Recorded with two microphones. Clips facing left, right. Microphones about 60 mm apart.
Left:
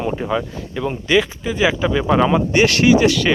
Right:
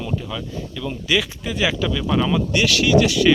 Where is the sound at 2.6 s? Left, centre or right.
Left.